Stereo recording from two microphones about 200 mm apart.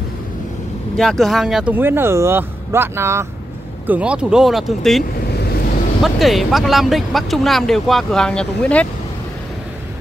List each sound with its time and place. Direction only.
0.9 s speech: centre (ahead or behind)
5.3 s vehicle: 55° left (ahead or behind)
6.0 s speech: centre (ahead or behind)